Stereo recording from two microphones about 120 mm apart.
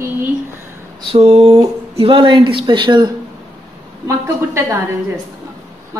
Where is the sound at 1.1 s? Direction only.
55° right (ahead or behind).